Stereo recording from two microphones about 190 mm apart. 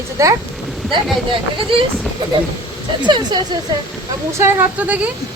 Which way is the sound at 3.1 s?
25° right (ahead or behind).